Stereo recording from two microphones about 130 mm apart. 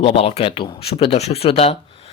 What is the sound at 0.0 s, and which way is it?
Speech, 50° left (ahead or behind).